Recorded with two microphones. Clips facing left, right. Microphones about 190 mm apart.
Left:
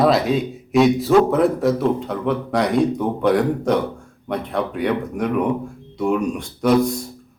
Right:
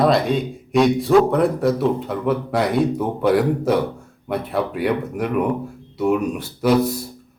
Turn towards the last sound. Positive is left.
turn(degrees=-5)  # may be behind; listen again after turning